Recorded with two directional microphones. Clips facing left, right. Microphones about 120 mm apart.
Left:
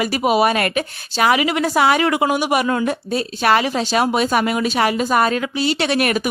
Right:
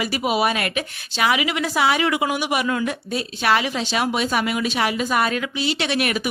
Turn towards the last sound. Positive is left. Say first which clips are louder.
# left 4 dB
turn(degrees=45)  # may be behind; listen again after turning